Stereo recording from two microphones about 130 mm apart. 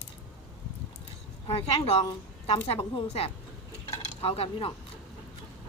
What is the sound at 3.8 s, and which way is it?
Dishes, 50° left (ahead or behind).